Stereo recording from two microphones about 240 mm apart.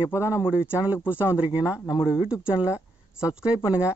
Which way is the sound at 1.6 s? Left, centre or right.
Centre.